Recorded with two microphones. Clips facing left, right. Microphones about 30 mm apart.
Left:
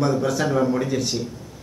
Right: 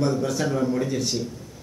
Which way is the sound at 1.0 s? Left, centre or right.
Centre.